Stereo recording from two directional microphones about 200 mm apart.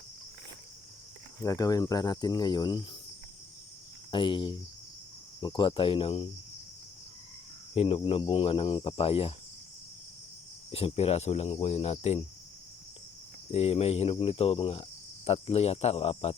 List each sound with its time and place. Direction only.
1.4 s cricket: 15° left (ahead or behind)
4.1 s cricket: 25° left (ahead or behind)
7.8 s cricket: 30° left (ahead or behind)
10.7 s cricket: 30° left (ahead or behind)
13.5 s cricket: 30° left (ahead or behind)